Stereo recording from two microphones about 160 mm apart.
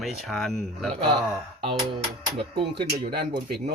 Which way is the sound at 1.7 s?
30° right (ahead or behind).